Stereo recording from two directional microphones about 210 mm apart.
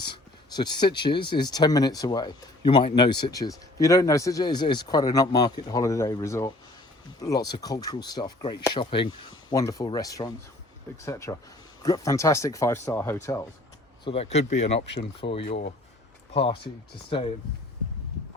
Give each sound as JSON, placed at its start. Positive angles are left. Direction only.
{"t": 0.0, "sound": "speech", "side_deg": 20}
{"t": 14.0, "sound": "speech", "side_deg": 25}